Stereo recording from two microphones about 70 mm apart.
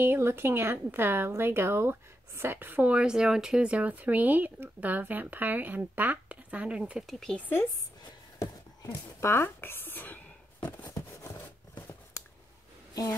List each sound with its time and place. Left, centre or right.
0.0 s a woman's voice: right; by 7.1 s centre
7.1 s speech: centre
7.3 s speech: left
8.8 s speech: left
11.0 s a sound: left